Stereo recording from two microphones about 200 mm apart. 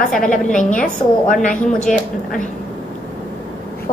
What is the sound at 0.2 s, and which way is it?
A woman's voice, 40° left (ahead or behind).